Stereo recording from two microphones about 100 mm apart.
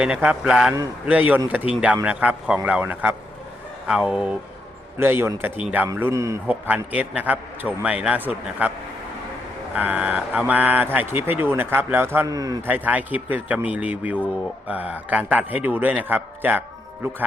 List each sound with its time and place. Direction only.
0.0 s a man's voice: 10° right (ahead or behind)
1.0 s a man's voice: 15° right (ahead or behind)
4.9 s speech: 20° right (ahead or behind)
6.5 s a man's voice: 15° right (ahead or behind)
9.7 s speech: 15° right (ahead or behind)
12.3 s speech: 35° right (ahead or behind)
12.6 s a man's voice: 15° right (ahead or behind)